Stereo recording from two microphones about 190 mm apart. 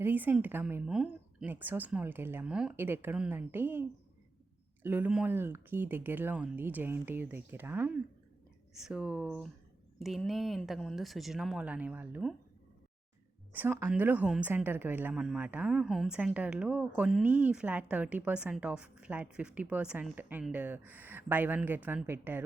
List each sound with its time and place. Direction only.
0.0 s a woman's voice: 10° right (ahead or behind)
13.5 s a woman's voice: 10° right (ahead or behind)